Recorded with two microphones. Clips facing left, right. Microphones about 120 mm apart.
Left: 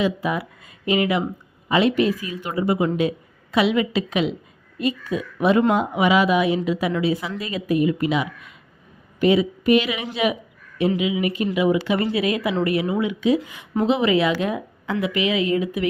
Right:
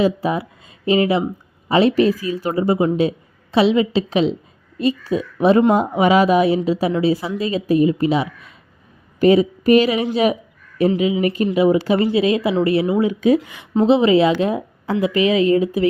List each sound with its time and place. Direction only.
0.0 s speech: 35° right (ahead or behind)
13.7 s speech: 30° right (ahead or behind)